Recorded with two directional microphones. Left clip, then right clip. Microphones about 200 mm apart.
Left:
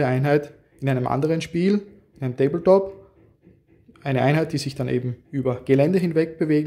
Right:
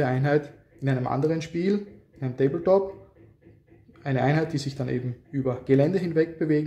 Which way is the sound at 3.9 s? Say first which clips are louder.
Left 4 dB; 35° left (ahead or behind).